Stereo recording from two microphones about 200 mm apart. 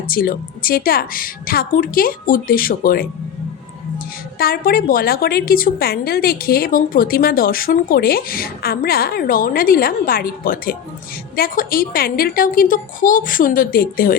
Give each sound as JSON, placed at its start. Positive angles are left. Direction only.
{"t": 0.1, "sound": "a woman's voice", "side_deg": 45}